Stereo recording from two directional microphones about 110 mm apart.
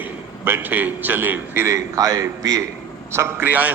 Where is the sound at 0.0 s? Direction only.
20° right (ahead or behind).